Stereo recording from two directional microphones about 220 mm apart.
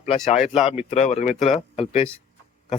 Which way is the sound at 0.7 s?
30° left (ahead or behind).